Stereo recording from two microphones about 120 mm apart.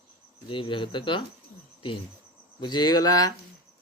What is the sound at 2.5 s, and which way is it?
Speech, 35° left (ahead or behind).